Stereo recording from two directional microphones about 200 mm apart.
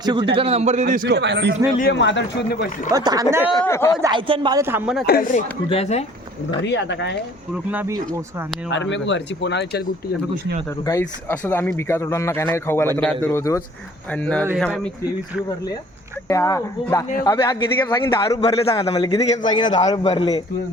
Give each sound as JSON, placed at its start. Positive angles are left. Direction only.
{"t": 0.0, "sound": "a man's voice", "side_deg": -20}
{"t": 1.0, "sound": "speech", "side_deg": -60}
{"t": 1.8, "sound": "speech", "side_deg": 60}
{"t": 2.9, "sound": "a woman's voice", "side_deg": -20}
{"t": 3.6, "sound": "speech", "side_deg": 10}
{"t": 4.0, "sound": "a woman's voice", "side_deg": -20}
{"t": 5.0, "sound": "speech", "side_deg": 45}
{"t": 5.6, "sound": "speech", "side_deg": 30}
{"t": 6.7, "sound": "speech", "side_deg": 60}
{"t": 7.5, "sound": "a woman's voice", "side_deg": -10}
{"t": 8.7, "sound": "speech", "side_deg": 65}
{"t": 11.0, "sound": "speech", "side_deg": 10}
{"t": 16.3, "sound": "a man's voice", "side_deg": 15}